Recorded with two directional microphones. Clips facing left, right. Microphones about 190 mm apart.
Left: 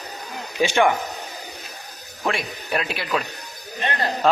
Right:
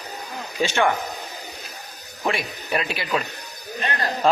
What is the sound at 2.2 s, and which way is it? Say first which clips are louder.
Speech: even; centre (ahead or behind).